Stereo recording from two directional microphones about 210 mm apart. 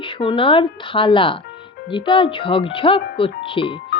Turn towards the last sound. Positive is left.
turn(degrees=25)  # may be behind; listen again after turning